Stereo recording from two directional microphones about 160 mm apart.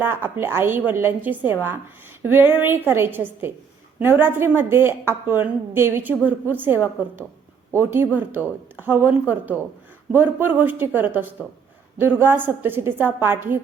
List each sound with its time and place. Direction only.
0.0 s a woman's voice: 15° right (ahead or behind)